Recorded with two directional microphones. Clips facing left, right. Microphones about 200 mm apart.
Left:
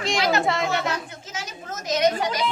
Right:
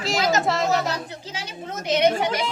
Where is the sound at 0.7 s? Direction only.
40° right (ahead or behind).